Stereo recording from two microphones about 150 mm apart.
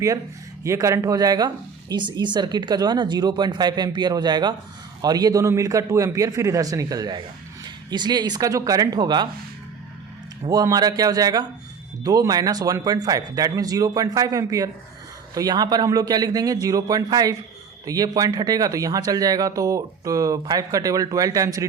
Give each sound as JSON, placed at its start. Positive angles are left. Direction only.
{"t": 0.6, "sound": "speech", "side_deg": -20}
{"t": 10.5, "sound": "speech", "side_deg": -25}